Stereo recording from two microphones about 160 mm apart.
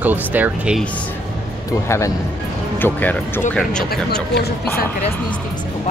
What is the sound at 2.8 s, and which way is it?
Speech, 10° left (ahead or behind).